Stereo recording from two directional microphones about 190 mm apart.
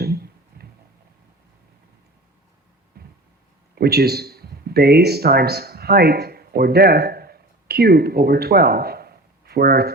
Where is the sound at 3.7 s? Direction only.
55° right (ahead or behind).